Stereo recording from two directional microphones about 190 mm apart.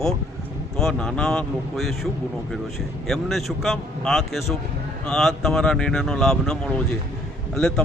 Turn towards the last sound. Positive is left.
turn(degrees=5)  # may be behind; listen again after turning